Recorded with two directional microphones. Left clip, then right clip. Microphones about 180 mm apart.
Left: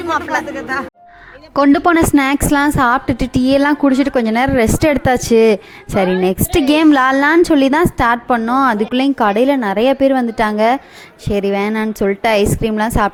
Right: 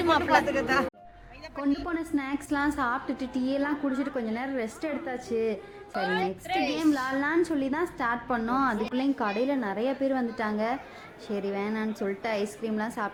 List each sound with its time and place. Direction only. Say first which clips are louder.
0.1 s speech: left 6 dB; 10° left (ahead or behind)
1.5 s a woman's voice: left 19 dB; 50° left (ahead or behind)
6.7 s a woman's voice: left 16 dB; 55° left (ahead or behind)